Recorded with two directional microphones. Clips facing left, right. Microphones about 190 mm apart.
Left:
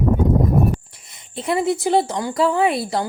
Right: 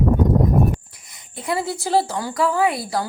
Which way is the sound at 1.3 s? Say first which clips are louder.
Left 4 dB; 25° left (ahead or behind).